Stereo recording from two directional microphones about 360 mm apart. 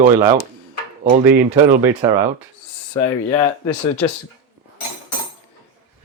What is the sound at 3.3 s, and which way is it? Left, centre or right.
Speech, centre.